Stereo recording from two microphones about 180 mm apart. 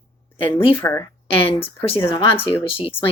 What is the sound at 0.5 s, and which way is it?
Speech, 10° left (ahead or behind).